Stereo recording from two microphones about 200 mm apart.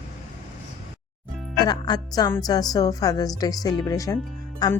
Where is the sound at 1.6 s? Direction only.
20° left (ahead or behind).